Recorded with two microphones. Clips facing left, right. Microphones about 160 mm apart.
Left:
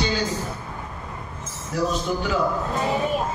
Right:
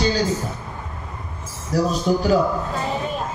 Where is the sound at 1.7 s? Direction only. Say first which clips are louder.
Right 4 dB; 40° right (ahead or behind).